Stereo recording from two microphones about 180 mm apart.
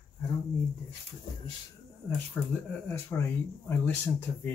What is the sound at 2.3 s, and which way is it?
Speech, 10° left (ahead or behind).